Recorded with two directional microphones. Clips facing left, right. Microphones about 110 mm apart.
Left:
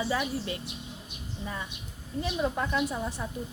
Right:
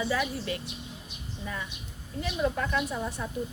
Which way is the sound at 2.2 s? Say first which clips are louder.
Even; 20° left (ahead or behind).